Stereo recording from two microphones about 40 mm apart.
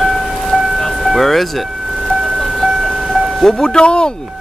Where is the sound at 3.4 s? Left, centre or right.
Centre.